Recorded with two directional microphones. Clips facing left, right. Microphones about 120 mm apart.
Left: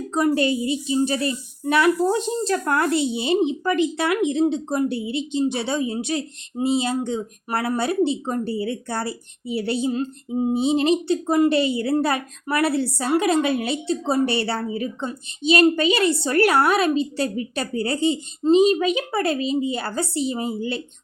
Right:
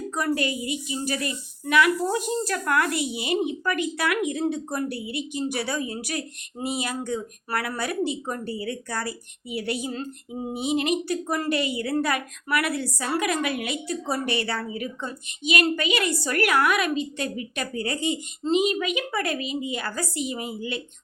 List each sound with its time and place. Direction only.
0.1 s a woman's voice: 25° left (ahead or behind)